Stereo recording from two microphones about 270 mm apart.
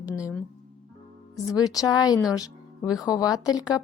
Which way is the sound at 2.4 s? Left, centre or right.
Centre.